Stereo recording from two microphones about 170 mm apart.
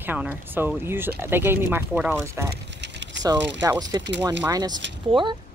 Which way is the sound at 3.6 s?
20° right (ahead or behind).